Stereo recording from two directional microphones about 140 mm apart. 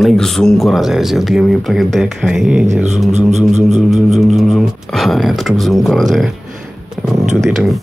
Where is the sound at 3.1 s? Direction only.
55° right (ahead or behind).